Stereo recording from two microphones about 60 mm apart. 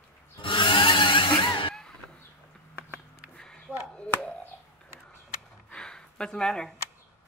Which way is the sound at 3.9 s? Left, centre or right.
Left.